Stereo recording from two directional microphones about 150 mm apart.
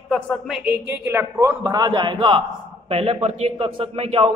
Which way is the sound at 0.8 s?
15° right (ahead or behind).